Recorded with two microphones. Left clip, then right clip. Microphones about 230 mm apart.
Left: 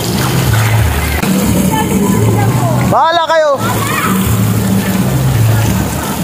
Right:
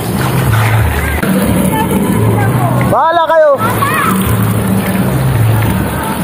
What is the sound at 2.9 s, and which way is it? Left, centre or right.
Vehicle, left.